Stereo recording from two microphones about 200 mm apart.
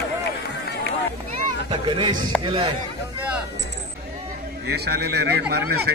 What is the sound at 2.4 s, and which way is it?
Speech, 30° right (ahead or behind).